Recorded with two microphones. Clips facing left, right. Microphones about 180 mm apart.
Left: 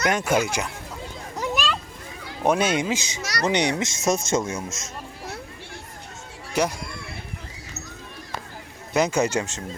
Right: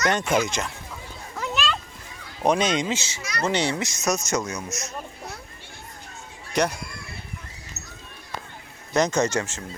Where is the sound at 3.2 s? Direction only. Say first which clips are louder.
Left 2 dB; 80° left.